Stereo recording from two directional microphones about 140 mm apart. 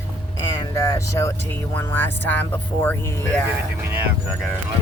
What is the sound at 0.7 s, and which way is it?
Speech, 20° left (ahead or behind).